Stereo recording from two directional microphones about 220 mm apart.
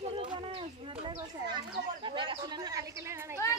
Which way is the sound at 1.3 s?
20° right (ahead or behind).